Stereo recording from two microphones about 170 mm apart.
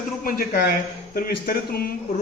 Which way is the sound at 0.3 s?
60° left (ahead or behind).